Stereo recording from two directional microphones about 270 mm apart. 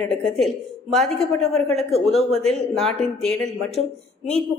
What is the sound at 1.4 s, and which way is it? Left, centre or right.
Speech, right.